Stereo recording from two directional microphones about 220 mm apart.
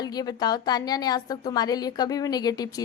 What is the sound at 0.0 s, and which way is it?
A woman's voice, 15° left (ahead or behind).